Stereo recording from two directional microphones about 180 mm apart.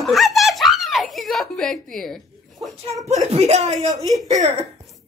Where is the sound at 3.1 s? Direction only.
40° right (ahead or behind).